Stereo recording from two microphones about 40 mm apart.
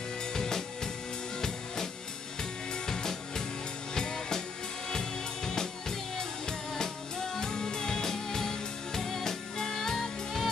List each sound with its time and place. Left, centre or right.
0.3 s music: centre
2.7 s music: centre